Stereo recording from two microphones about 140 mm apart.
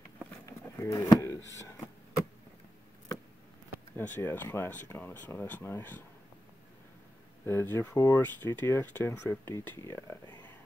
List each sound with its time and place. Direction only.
0.5 s a sound: 25° left (ahead or behind)
3.9 s speech: 15° left (ahead or behind)
7.4 s speech: 15° left (ahead or behind)